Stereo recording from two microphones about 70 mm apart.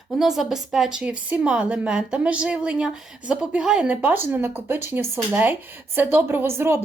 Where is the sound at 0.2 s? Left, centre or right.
Centre.